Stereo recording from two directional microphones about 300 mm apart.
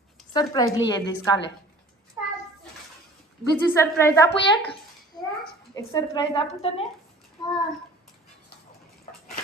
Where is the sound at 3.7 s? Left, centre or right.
Centre.